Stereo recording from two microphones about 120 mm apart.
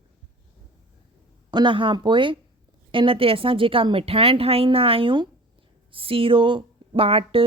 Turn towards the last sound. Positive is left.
turn(degrees=-50)  # may be behind; listen again after turning